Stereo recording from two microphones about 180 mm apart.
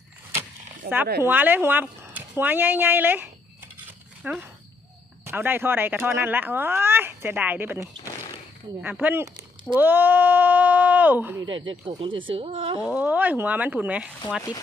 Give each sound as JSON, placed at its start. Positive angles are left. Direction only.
{"t": 0.9, "sound": "speech", "side_deg": -55}
{"t": 1.2, "sound": "speech", "side_deg": -10}
{"t": 11.9, "sound": "speech", "side_deg": -30}
{"t": 12.8, "sound": "speech", "side_deg": -5}